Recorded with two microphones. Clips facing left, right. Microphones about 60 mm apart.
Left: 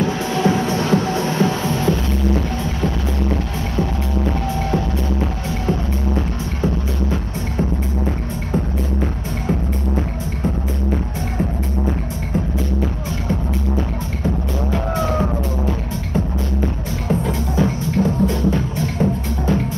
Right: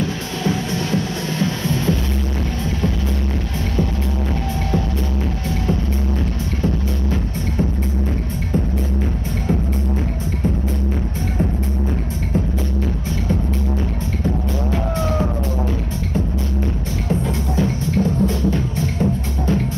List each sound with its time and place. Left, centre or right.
0.0 s music: left
1.7 s music: centre
17.1 s music: centre